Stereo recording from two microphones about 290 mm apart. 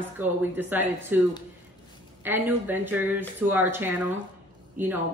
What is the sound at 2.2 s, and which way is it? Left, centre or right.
Speech, centre.